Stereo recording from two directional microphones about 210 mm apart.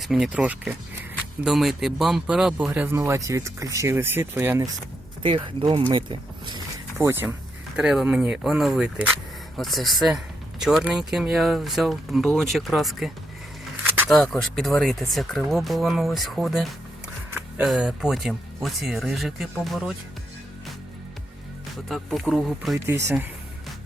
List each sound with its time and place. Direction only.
0.0 s speech: centre (ahead or behind)
5.2 s speech: 25° right (ahead or behind)
7.0 s speech: 10° right (ahead or behind)
14.1 s speech: centre (ahead or behind)
21.8 s speech: centre (ahead or behind)
22.9 s speech: 10° right (ahead or behind)